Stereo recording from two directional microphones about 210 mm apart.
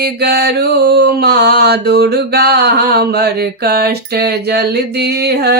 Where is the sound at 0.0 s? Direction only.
50° right (ahead or behind).